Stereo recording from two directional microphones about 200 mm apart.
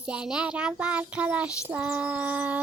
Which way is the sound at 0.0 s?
5° right (ahead or behind).